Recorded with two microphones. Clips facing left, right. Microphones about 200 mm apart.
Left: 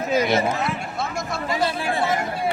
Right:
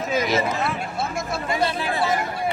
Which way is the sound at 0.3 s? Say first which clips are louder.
Left 2 dB; 55° left (ahead or behind).